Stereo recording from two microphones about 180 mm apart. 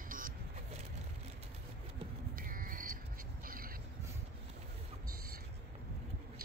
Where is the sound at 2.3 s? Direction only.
50° right (ahead or behind).